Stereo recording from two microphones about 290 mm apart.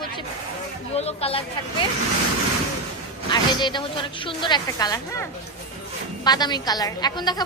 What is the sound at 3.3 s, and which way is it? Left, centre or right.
A woman's voice, centre.